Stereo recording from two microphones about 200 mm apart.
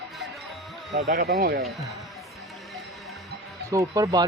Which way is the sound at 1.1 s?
50° right (ahead or behind).